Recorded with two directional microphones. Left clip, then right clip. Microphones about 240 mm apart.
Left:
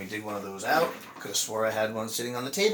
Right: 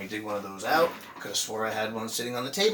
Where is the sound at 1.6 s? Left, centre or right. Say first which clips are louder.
Left 5 dB; centre.